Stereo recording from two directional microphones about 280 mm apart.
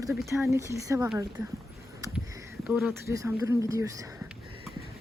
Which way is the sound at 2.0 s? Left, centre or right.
Centre.